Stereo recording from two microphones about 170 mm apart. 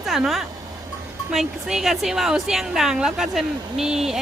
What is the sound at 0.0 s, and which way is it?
Speech, centre (ahead or behind).